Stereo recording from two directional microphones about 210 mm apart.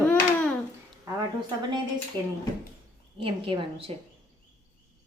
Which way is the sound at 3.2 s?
25° right (ahead or behind).